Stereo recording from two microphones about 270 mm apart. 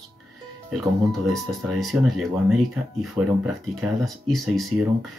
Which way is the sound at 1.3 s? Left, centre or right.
Centre.